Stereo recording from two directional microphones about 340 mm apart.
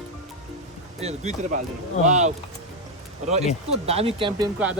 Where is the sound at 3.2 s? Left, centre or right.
Centre.